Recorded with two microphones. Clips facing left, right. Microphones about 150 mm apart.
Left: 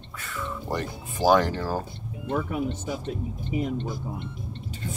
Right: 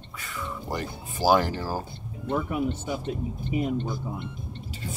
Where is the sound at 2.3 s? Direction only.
60° right (ahead or behind).